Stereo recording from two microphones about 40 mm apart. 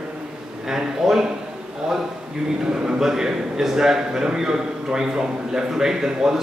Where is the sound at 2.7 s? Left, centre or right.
Centre.